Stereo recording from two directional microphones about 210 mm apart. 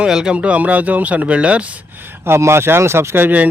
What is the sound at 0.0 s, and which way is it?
A man's voice, 5° right (ahead or behind).